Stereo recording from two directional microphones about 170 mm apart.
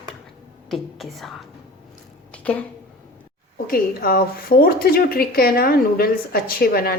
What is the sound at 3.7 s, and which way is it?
A woman's voice, 60° left (ahead or behind).